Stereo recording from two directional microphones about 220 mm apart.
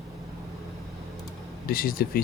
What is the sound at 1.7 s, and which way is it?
Speech, 40° left (ahead or behind).